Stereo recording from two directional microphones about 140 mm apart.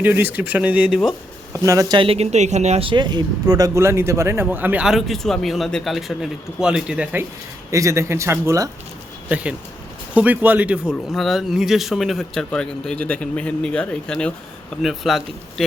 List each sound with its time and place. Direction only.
0.0 s speech: 15° right (ahead or behind)
1.6 s speech: 25° right (ahead or behind)
2.0 s speech: 45° right (ahead or behind)
2.8 s speech: 35° right (ahead or behind); by 7.3 s 10° right (ahead or behind)
7.7 s speech: 20° right (ahead or behind)
9.3 s speech: 10° right (ahead or behind)
11.1 s speech: centre (ahead or behind)